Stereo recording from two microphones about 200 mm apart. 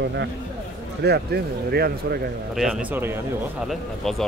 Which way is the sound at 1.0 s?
55° right (ahead or behind).